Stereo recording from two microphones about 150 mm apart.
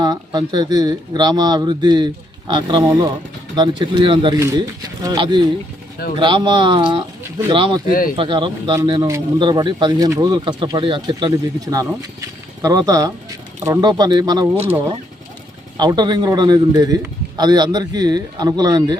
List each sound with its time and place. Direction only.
0.0 s a man's voice: 25° right (ahead or behind)
4.4 s a man's voice: 20° right (ahead or behind)
7.9 s speech: 70° left (ahead or behind)
8.1 s a man's voice: 30° right (ahead or behind)
15.8 s a man's voice: 30° right (ahead or behind)